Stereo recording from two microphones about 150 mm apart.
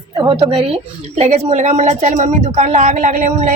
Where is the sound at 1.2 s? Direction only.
45° right (ahead or behind).